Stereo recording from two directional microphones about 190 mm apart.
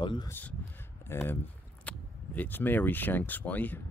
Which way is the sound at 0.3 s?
10° left (ahead or behind).